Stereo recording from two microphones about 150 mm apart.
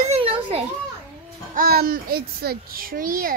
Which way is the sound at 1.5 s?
85° right.